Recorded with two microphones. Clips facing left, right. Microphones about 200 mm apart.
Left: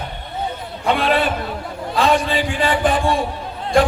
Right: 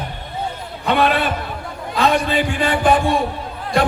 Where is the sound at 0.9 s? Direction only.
55° right (ahead or behind).